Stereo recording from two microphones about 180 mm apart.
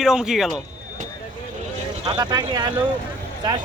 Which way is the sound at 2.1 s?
20° right (ahead or behind).